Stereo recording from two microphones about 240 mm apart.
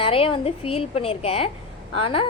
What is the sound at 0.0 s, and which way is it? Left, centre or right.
A woman's voice, left.